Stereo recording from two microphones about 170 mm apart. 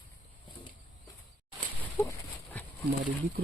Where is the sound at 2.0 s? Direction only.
15° left (ahead or behind).